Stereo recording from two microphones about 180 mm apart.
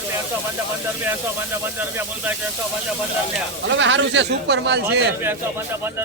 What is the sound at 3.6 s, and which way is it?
Speech, 90° right.